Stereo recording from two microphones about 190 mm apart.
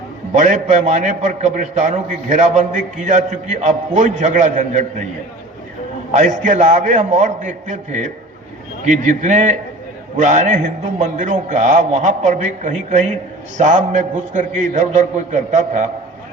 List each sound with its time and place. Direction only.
0.3 s a man's voice: 40° right (ahead or behind)
6.1 s a man's voice: 40° right (ahead or behind)